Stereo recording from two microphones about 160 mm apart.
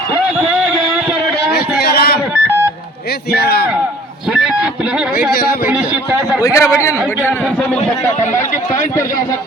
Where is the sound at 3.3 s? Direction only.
80° left.